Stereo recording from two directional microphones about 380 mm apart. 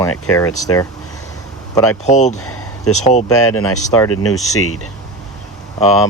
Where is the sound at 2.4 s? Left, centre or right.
Left.